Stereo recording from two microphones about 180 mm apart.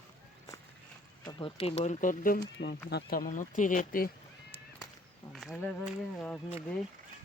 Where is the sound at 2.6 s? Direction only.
70° left (ahead or behind); by 4.1 s 50° left (ahead or behind).